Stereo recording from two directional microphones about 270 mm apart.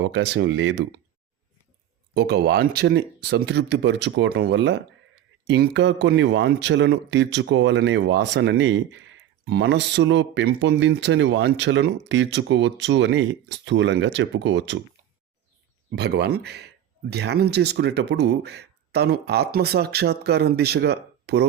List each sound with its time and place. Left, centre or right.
0.0 s speech: right
2.1 s speech: right
16.0 s speech: right